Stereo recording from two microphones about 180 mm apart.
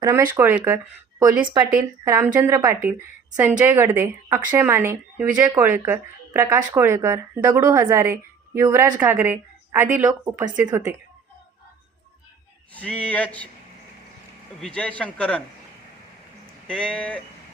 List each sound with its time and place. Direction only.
0.0 s speech: 10° right (ahead or behind)
12.7 s a man's voice: 5° left (ahead or behind)
14.6 s a man's voice: 5° left (ahead or behind)
16.6 s speech: 5° left (ahead or behind)